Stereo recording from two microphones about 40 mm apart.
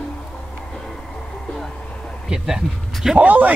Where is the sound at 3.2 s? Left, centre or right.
Right.